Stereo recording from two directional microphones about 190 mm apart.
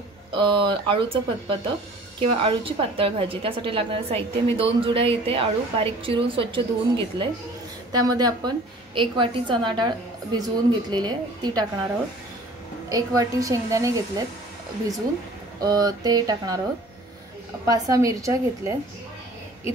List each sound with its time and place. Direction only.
0.4 s a woman's voice: 25° right (ahead or behind)
12.9 s a woman's voice: 20° right (ahead or behind)
15.6 s a woman's voice: 20° right (ahead or behind)
17.6 s a woman's voice: 20° right (ahead or behind)